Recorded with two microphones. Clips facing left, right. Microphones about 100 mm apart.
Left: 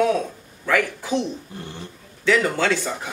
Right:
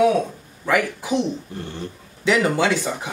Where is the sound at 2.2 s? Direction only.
15° right (ahead or behind).